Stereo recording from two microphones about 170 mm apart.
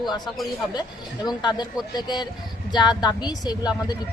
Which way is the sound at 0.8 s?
25° left (ahead or behind).